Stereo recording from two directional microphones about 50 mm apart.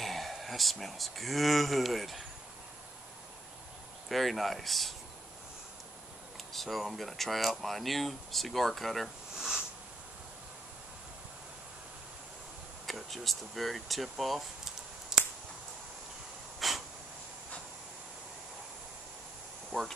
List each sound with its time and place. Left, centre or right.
0.0 s speech: centre
4.1 s speech: centre
6.5 s speech: centre
12.8 s speech: centre
16.5 s a sound: centre
19.7 s speech: right